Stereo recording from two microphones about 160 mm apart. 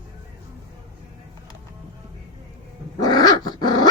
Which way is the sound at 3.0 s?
25° left (ahead or behind).